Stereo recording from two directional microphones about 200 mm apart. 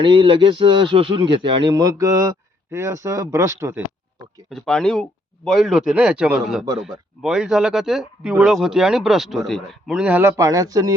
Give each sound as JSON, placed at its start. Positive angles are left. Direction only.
{"t": 0.0, "sound": "speech", "side_deg": -25}
{"t": 4.4, "sound": "speech", "side_deg": 0}